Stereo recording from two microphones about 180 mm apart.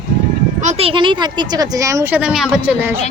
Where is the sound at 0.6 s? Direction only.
30° right (ahead or behind).